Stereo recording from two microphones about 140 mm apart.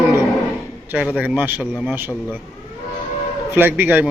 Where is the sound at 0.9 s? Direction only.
10° right (ahead or behind).